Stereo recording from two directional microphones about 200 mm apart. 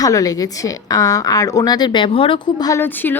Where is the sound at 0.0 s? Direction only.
15° left (ahead or behind).